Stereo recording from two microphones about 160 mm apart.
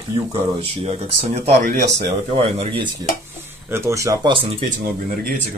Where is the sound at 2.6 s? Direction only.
35° right (ahead or behind).